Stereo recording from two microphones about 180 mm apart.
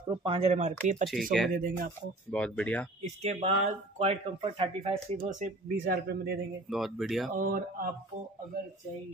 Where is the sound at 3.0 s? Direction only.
35° right (ahead or behind).